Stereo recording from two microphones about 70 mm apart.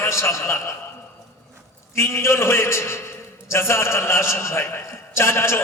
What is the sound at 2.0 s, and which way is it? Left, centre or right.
A man's voice, left.